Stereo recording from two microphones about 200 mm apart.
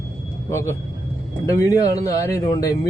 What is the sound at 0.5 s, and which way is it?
Speech, 15° left (ahead or behind).